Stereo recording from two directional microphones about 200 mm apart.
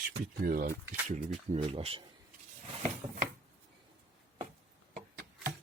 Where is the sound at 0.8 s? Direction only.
10° right (ahead or behind).